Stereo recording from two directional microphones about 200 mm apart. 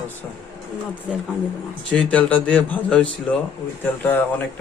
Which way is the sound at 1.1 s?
5° right (ahead or behind).